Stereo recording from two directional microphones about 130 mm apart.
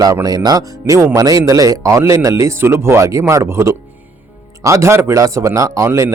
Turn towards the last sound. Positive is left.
turn(degrees=-25)  # may be behind; listen again after turning